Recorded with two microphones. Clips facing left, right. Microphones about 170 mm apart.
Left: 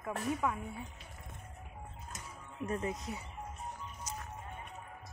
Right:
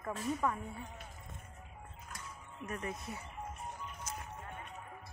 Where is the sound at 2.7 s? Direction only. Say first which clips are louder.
Left 4 dB; 20° left (ahead or behind).